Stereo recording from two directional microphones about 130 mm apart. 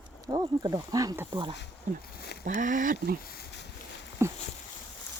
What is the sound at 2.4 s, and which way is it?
Speech, 75° right (ahead or behind).